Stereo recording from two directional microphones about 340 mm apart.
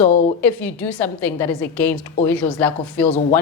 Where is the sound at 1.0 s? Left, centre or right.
Centre.